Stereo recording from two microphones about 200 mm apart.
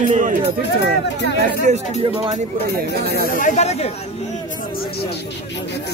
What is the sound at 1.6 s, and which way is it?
Speech, 35° right (ahead or behind).